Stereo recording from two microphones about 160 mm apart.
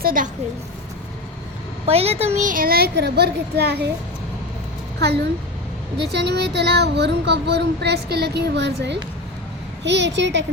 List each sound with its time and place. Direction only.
0.0 s a child's voice: 60° right (ahead or behind)
1.9 s a child's voice: 40° right (ahead or behind); by 3.8 s 90° right
6.0 s speech: 90° right